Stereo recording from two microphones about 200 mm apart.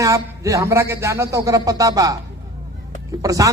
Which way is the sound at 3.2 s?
15° right (ahead or behind).